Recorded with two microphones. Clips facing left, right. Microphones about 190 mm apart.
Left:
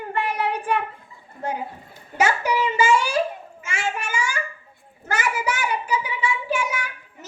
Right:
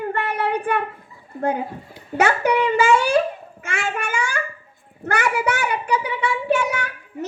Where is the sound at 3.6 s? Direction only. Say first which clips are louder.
Right 2 dB; 60° right (ahead or behind).